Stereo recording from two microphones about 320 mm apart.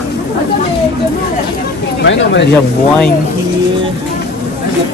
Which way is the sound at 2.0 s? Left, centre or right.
Left.